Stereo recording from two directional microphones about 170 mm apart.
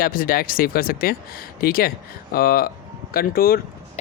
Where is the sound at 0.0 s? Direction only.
55° left (ahead or behind).